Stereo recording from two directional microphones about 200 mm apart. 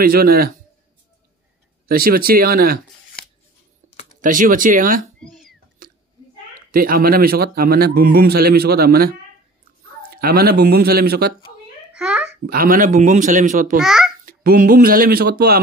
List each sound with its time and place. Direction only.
0.0 s a man's voice: 50° right (ahead or behind)
1.9 s a man's voice: 50° right (ahead or behind)
3.8 s a sound: 40° right (ahead or behind)
4.2 s a man's voice: 40° right (ahead or behind)
5.2 s cat: centre (ahead or behind)
5.8 s chewing: 45° right (ahead or behind)
6.7 s a man's voice: 45° right (ahead or behind)
11.9 s babbling: 5° right (ahead or behind)
12.4 s a man's voice: 45° right (ahead or behind)
13.7 s a child's voice: centre (ahead or behind)
14.2 s a man's voice: 45° right (ahead or behind)